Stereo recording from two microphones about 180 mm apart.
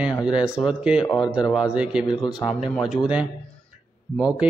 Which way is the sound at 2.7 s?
Centre (ahead or behind).